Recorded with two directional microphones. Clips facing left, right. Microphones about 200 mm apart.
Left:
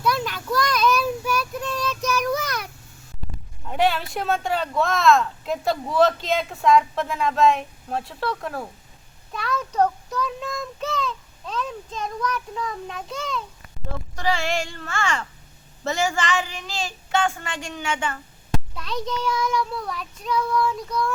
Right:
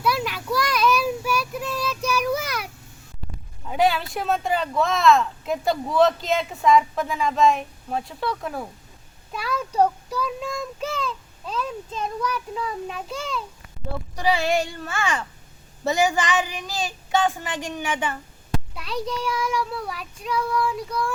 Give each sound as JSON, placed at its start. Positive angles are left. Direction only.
{"t": 0.0, "sound": "child singing", "side_deg": -5}
{"t": 3.7, "sound": "speech", "side_deg": 0}
{"t": 9.3, "sound": "child singing", "side_deg": -5}